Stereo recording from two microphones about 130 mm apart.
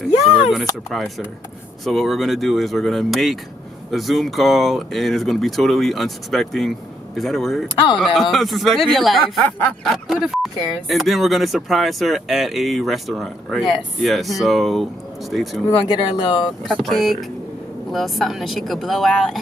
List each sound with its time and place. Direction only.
0.5 s speech: centre (ahead or behind)
15.7 s speech: 40° left (ahead or behind)
16.7 s speech: centre (ahead or behind)